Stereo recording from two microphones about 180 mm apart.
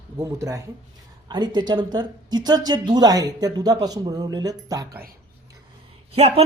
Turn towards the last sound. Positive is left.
turn(degrees=-35)  # may be behind; listen again after turning